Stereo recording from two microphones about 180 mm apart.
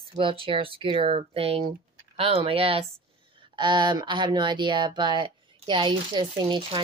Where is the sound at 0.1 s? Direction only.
30° right (ahead or behind).